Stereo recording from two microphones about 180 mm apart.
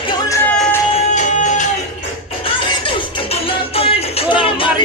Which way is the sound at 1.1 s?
40° left (ahead or behind).